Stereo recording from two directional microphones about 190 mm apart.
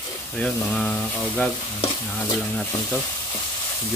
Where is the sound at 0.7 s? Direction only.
5° left (ahead or behind).